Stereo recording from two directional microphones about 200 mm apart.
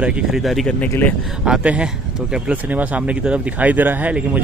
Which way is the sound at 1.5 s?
5° right (ahead or behind).